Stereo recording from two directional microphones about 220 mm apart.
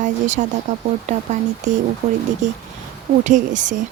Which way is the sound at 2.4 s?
35° right (ahead or behind).